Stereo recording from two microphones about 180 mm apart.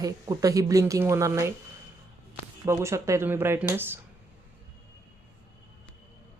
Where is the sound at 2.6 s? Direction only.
15° right (ahead or behind).